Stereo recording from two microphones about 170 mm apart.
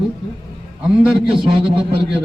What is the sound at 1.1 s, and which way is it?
Speech, 30° right (ahead or behind).